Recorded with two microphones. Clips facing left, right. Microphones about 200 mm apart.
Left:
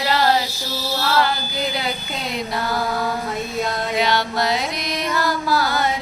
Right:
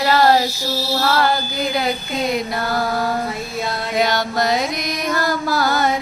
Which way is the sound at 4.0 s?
45° right (ahead or behind).